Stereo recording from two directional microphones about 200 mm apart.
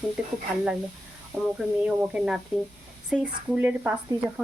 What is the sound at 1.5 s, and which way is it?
Speech, 5° right (ahead or behind).